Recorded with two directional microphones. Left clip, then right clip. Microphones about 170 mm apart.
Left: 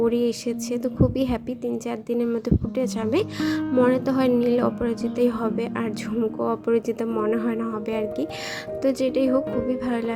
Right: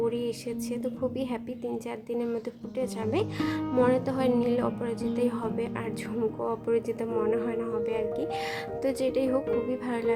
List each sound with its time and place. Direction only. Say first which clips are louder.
0.0 s a woman's voice: left 7 dB; 25° left (ahead or behind)